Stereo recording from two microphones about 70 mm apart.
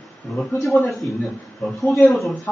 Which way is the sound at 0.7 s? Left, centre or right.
Left.